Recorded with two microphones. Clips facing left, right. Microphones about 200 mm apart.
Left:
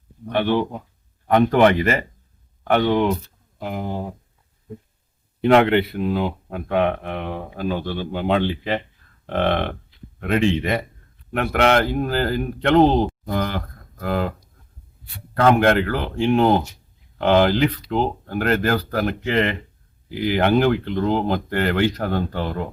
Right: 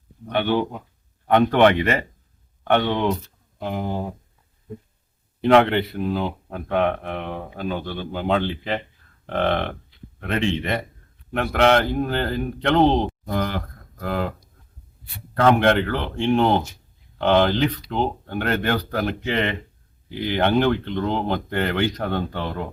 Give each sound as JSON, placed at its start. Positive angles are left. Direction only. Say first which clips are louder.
{"t": 0.3, "sound": "speech", "louder": "left 1 dB", "side_deg": 0}
{"t": 5.4, "sound": "speech", "louder": "left 1 dB", "side_deg": 5}
{"t": 15.6, "sound": "speech", "louder": "left 1 dB", "side_deg": 5}